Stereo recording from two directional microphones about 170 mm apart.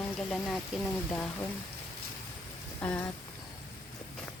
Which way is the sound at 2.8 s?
10° left (ahead or behind).